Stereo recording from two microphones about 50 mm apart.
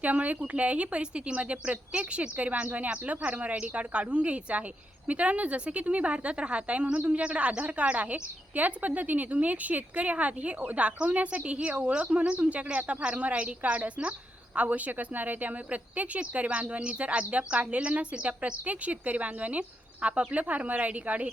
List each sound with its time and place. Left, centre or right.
0.0 s a woman's voice: right